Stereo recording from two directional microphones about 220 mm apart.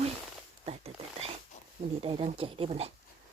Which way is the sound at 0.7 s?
25° right (ahead or behind).